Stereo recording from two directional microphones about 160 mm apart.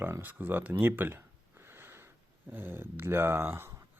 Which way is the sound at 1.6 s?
15° right (ahead or behind).